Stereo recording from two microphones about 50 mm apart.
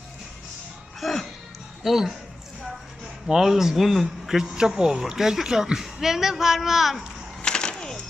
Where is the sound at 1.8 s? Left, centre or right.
Centre.